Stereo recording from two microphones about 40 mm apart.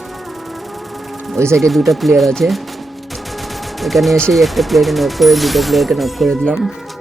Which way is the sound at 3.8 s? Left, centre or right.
Centre.